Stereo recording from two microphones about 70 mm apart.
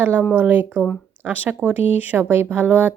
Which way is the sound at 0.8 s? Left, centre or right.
Centre.